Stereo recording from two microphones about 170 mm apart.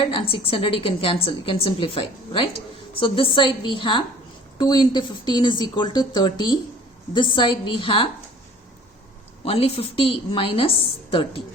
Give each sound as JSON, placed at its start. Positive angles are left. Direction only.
{"t": 0.0, "sound": "a woman's voice", "side_deg": 30}
{"t": 9.4, "sound": "a woman's voice", "side_deg": 35}